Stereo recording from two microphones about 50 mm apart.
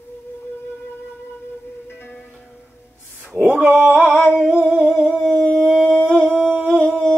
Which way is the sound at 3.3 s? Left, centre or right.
Centre.